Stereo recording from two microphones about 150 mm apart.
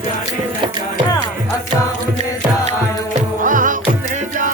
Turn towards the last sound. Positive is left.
turn(degrees=-60)  # may be behind; listen again after turning